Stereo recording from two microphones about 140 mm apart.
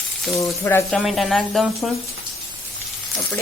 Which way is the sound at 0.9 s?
Centre (ahead or behind).